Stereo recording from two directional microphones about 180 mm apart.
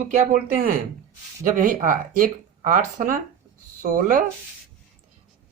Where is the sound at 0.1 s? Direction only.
45° right (ahead or behind).